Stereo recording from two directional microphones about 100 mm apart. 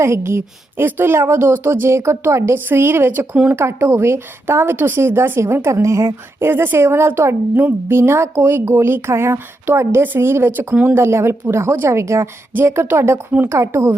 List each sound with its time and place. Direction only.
0.0 s a woman's voice: 25° right (ahead or behind)
6.5 s a woman's voice: 20° right (ahead or behind)
13.6 s a woman's voice: 30° right (ahead or behind)